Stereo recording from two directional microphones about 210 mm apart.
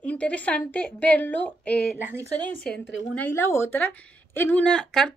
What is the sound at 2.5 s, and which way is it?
Speech, 45° left (ahead or behind).